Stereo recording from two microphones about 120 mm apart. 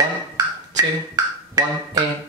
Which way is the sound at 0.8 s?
30° right (ahead or behind).